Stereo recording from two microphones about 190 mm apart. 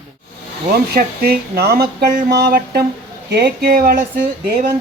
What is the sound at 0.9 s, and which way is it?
Speech, 55° right (ahead or behind).